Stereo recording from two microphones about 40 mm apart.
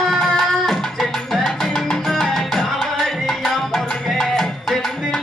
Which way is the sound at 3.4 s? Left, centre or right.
Centre.